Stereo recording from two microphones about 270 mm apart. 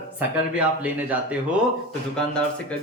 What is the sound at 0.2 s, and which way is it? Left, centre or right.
Speech, centre.